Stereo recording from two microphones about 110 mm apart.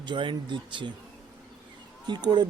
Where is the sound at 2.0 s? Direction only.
40° right (ahead or behind).